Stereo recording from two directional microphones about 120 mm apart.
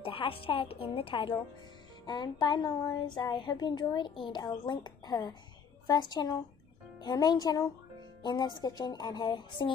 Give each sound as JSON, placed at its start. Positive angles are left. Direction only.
{"t": 0.0, "sound": "a woman's voice", "side_deg": 50}
{"t": 2.0, "sound": "speech", "side_deg": 35}